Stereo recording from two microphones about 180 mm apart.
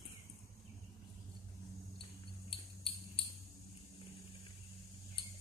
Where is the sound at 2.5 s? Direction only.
30° left (ahead or behind).